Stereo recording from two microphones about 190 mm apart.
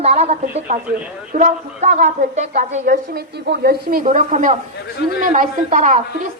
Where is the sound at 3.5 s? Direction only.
55° right (ahead or behind); by 6.0 s 40° right (ahead or behind).